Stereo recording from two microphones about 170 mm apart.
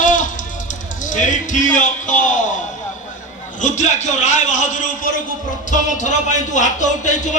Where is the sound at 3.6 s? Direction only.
45° left (ahead or behind).